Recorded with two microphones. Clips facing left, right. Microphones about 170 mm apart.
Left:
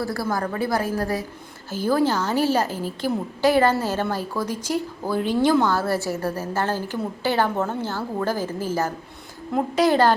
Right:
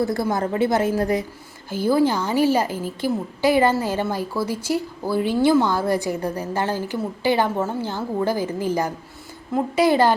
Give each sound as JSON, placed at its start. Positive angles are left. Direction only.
{"t": 0.0, "sound": "a woman's voice", "side_deg": -20}
{"t": 9.5, "sound": "speech", "side_deg": -5}